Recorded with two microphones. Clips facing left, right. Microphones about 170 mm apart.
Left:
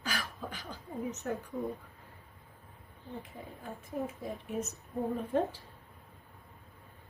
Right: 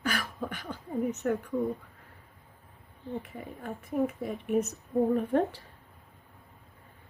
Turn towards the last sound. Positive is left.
turn(degrees=-65)  # may be behind; listen again after turning